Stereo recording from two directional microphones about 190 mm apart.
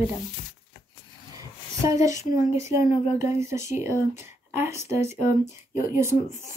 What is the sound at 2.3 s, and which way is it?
Speech, 15° right (ahead or behind).